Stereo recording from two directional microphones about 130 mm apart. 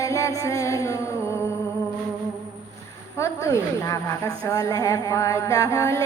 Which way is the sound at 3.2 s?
25° left (ahead or behind).